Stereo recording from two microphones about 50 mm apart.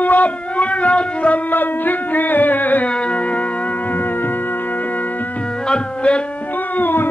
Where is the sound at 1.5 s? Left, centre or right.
Left.